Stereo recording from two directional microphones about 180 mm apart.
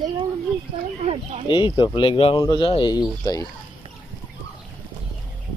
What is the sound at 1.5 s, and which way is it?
Speech, 30° left (ahead or behind).